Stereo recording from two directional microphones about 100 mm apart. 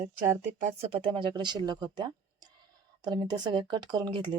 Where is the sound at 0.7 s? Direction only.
80° right.